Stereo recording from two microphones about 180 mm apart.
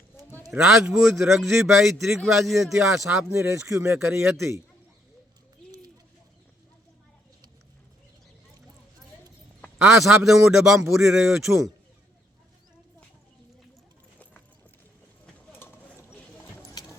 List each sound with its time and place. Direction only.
0.5 s a man's voice: 5° right (ahead or behind)
3.2 s speech: 15° right (ahead or behind)
9.7 s a man's voice: centre (ahead or behind)
15.5 s a sound: 15° left (ahead or behind)
16.6 s clip-clop: 15° left (ahead or behind)